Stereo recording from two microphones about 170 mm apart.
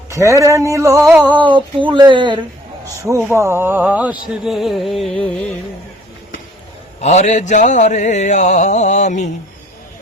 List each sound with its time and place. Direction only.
0.1 s speech: 15° right (ahead or behind)
1.5 s speech: 30° right (ahead or behind)
3.0 s speech: 15° right (ahead or behind); by 5.5 s 5° left (ahead or behind)
7.0 s mantra: 40° left (ahead or behind)